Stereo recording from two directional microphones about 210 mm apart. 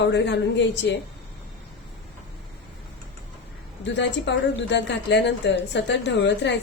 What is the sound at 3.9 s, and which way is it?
A woman's voice, 55° left (ahead or behind).